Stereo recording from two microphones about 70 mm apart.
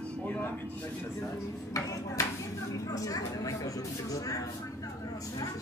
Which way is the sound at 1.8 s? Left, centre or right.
Left.